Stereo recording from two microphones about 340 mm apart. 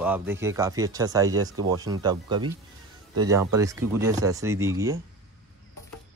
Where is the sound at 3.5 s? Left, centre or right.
Centre.